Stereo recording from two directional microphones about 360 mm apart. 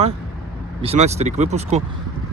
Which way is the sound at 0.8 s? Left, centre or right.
Centre.